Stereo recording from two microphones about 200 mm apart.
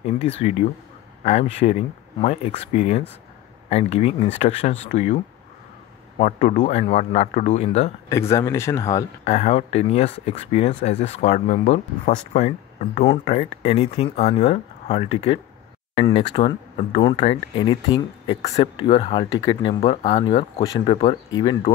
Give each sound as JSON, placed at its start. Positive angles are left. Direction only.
{"t": 0.0, "sound": "speech", "side_deg": 30}
{"t": 8.1, "sound": "speech", "side_deg": 15}
{"t": 9.2, "sound": "speech", "side_deg": 30}